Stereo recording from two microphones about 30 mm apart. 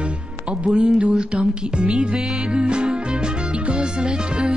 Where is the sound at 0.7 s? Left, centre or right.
Right.